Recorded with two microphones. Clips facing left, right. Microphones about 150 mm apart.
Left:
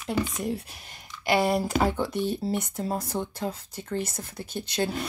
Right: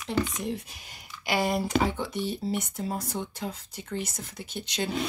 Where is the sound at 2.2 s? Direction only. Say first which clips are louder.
Left 3 dB; 10° right (ahead or behind).